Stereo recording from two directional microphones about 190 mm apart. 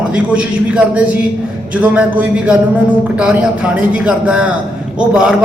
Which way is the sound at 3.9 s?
5° right (ahead or behind).